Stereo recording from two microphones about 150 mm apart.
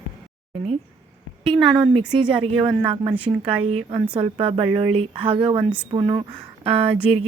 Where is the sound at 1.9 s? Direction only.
35° right (ahead or behind).